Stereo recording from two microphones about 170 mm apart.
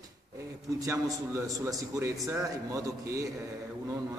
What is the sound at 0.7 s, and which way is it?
A man's voice, 20° right (ahead or behind).